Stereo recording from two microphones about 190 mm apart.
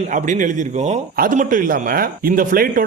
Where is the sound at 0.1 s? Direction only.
40° right (ahead or behind).